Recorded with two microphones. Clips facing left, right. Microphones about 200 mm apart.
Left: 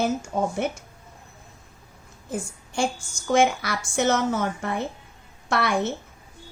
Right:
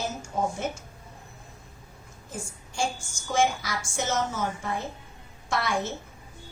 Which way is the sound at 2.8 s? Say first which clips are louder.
Left 4 dB; 60° left (ahead or behind).